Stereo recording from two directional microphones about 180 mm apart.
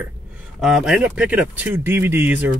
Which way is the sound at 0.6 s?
5° right (ahead or behind).